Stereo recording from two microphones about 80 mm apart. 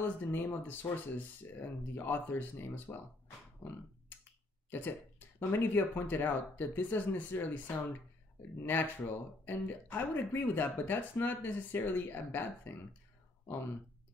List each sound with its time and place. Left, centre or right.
0.0 s speech: left
4.6 s speech: left